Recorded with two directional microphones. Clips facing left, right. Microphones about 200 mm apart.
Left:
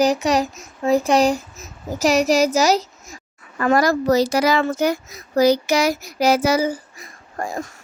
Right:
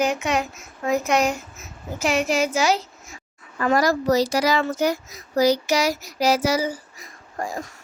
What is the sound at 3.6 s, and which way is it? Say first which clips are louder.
Speech: left 3 dB; 55° left (ahead or behind).